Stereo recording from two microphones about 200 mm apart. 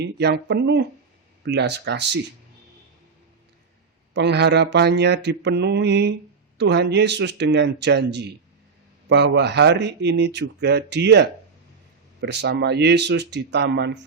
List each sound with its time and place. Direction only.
0.0 s speech: 55° right (ahead or behind)
4.1 s speech: 60° right (ahead or behind)